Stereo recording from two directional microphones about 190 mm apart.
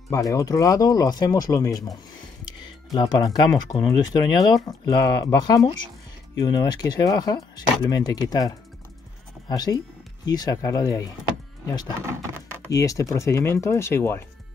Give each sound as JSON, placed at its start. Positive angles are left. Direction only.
{"t": 0.1, "sound": "speech", "side_deg": 15}
{"t": 12.0, "sound": "speech", "side_deg": -15}
{"t": 12.6, "sound": "speech", "side_deg": 15}